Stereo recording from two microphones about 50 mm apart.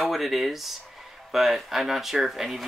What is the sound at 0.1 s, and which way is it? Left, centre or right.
Speech, centre.